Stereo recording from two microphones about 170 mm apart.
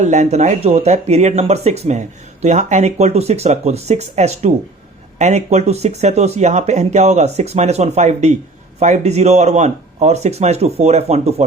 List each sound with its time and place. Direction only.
0.0 s speech: 45° right (ahead or behind)